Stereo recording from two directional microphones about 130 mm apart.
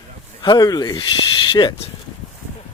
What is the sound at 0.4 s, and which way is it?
Speech, 30° left (ahead or behind).